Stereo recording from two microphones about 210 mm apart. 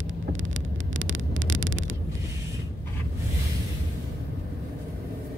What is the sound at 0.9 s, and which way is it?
Vehicle, 65° right (ahead or behind).